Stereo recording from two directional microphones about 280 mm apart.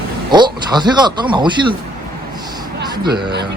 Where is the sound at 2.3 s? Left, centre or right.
Centre.